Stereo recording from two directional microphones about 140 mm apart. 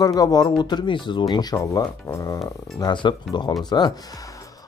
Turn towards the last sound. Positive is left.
turn(degrees=30)  # may be behind; listen again after turning